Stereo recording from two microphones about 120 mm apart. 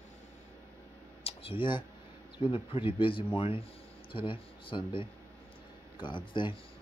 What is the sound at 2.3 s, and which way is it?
A man's voice, 50° left (ahead or behind).